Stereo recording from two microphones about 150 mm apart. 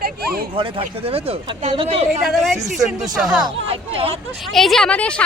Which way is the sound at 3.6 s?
40° right (ahead or behind).